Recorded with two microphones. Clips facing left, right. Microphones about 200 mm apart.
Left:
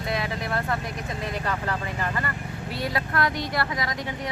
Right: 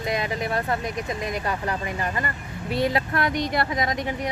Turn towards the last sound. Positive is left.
turn(degrees=-20)  # may be behind; listen again after turning